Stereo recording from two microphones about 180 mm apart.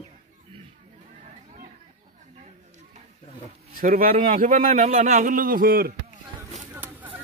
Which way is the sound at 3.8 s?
50° right (ahead or behind).